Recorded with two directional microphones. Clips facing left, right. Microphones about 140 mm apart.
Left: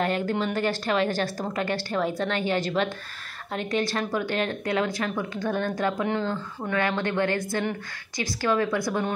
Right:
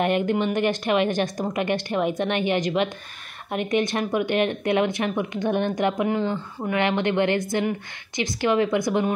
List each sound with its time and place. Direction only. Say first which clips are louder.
0.0 s a woman's voice: right 4 dB; 20° right (ahead or behind)